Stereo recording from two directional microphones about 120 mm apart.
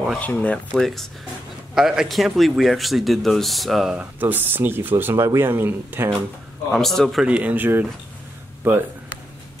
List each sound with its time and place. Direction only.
0.2 s speech: 10° left (ahead or behind)
4.2 s speech: 15° right (ahead or behind)
6.7 s speech: centre (ahead or behind)
7.2 s speech: 10° right (ahead or behind)